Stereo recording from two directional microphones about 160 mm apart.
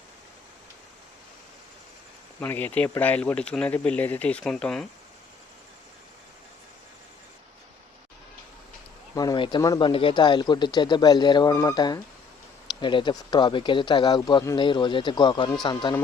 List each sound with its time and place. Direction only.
2.4 s speech: 10° left (ahead or behind)
9.1 s speech: 25° left (ahead or behind)